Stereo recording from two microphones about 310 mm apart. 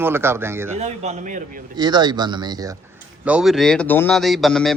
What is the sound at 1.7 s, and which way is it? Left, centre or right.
Speech, centre.